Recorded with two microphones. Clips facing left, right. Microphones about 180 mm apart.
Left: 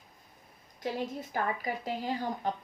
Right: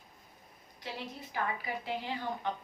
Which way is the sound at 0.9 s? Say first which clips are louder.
Left 3 dB; 45° left (ahead or behind).